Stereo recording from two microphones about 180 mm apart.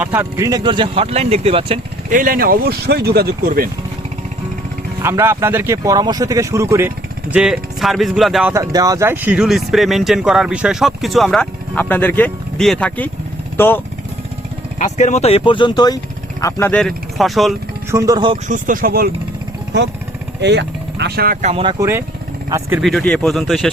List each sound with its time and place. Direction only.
0.0 s speech: 10° right (ahead or behind); by 1.8 s 30° right (ahead or behind)
2.0 s speech: 50° right (ahead or behind)
5.0 s speech: 15° right (ahead or behind)
8.5 s speech: 20° right (ahead or behind); by 13.8 s 10° left (ahead or behind)
14.8 s speech: 40° left (ahead or behind); by 16.8 s 15° left (ahead or behind)
16.8 s speech: centre (ahead or behind)
17.9 s speech: 20° right (ahead or behind)
18.4 s speech: 45° right (ahead or behind)
20.4 s vehicle: 75° right (ahead or behind)
21.4 s speech: 30° right (ahead or behind)
22.4 s speech: 15° right (ahead or behind)
22.8 s speech: centre (ahead or behind)